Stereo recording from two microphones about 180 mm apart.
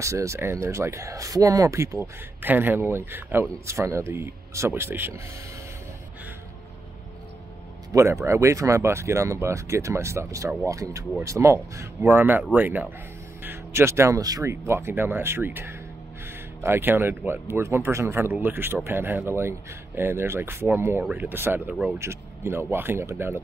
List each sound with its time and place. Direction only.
0.0 s speech: 15° right (ahead or behind)
7.9 s speech: 15° right (ahead or behind)